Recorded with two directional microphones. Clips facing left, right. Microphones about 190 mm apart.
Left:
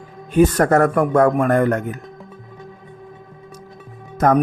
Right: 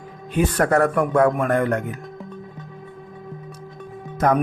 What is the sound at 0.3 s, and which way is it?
Speech, 45° left (ahead or behind).